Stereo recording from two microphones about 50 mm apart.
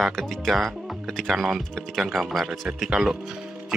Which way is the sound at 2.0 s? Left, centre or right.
Centre.